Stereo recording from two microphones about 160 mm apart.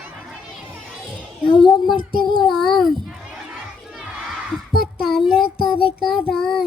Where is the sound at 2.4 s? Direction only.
Centre (ahead or behind).